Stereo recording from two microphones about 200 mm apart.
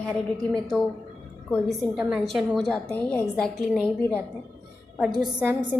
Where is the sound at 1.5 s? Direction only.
Centre (ahead or behind).